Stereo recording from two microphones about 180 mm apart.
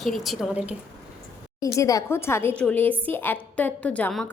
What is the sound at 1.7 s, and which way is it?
A woman's voice, 20° left (ahead or behind).